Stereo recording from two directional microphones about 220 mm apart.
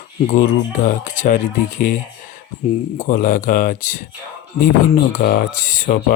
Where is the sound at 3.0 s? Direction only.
35° left (ahead or behind).